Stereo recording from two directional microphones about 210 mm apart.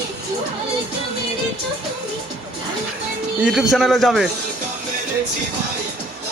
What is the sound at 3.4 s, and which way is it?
Speech, 5° right (ahead or behind).